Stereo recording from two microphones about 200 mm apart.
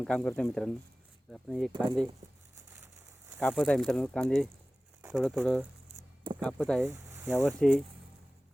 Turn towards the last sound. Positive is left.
turn(degrees=5)  # may be behind; listen again after turning